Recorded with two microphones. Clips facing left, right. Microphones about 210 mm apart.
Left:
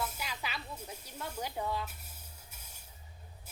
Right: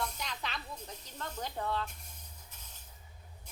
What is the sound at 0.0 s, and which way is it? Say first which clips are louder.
Snake: even; 5° left (ahead or behind).